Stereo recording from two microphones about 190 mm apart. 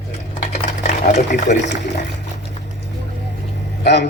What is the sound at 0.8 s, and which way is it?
Water, 35° left (ahead or behind).